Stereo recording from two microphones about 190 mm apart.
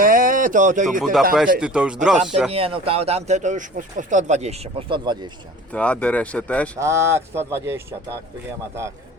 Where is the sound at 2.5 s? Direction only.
30° right (ahead or behind).